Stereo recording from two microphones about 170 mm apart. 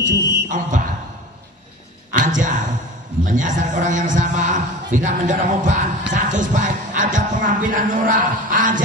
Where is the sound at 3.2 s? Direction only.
50° right (ahead or behind).